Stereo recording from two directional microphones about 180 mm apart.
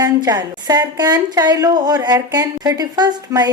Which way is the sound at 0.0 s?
20° right (ahead or behind).